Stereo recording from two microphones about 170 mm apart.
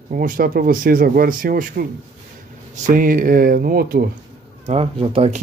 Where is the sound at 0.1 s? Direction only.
55° right (ahead or behind).